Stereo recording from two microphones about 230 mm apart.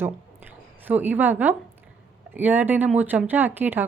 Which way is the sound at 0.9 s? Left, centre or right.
Centre.